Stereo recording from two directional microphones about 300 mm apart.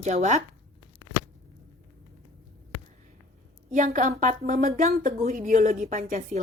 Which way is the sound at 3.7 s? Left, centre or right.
Right.